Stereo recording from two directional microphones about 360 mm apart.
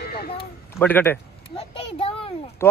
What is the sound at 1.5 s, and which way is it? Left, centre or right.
A child's voice, centre.